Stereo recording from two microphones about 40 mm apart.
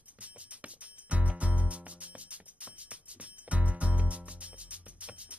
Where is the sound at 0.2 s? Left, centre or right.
Right.